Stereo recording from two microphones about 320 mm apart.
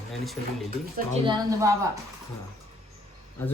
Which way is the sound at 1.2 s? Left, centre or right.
Centre.